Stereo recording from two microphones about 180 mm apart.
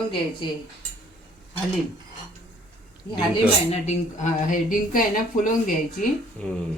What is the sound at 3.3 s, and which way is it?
A woman's voice, 35° left (ahead or behind).